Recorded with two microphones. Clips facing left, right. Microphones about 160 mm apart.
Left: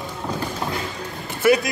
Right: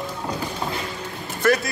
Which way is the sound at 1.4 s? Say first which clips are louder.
Left 3 dB; 10° left (ahead or behind).